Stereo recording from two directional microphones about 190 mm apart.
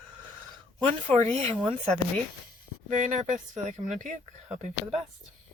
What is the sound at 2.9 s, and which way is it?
Speech, 40° right (ahead or behind).